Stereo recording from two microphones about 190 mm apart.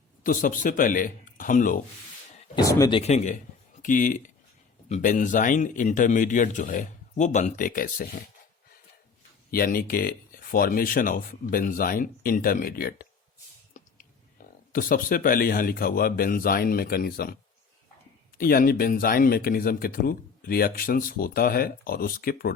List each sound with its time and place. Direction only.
0.2 s speech: 45° left (ahead or behind)
2.6 s speech: 20° left (ahead or behind)
3.0 s a man's voice: 35° left (ahead or behind)
9.5 s speech: 50° left (ahead or behind)
13.7 s a sound: 40° left (ahead or behind)
14.7 s speech: 50° left (ahead or behind)
18.3 s speech: 50° left (ahead or behind)